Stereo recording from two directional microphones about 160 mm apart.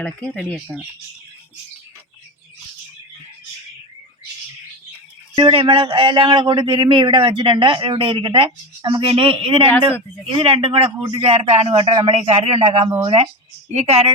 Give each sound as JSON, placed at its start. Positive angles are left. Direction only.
{"t": 0.0, "sound": "speech", "side_deg": 10}
{"t": 5.4, "sound": "a man's voice", "side_deg": -35}